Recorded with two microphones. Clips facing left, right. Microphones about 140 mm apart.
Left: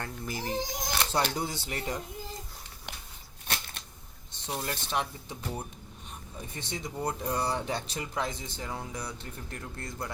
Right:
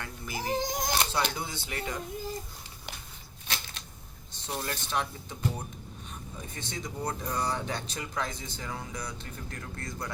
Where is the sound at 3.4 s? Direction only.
55° left (ahead or behind).